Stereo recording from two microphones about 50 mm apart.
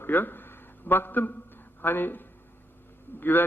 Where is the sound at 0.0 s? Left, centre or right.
Left.